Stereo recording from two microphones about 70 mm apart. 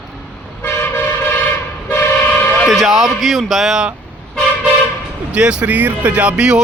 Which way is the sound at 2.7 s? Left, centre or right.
Centre.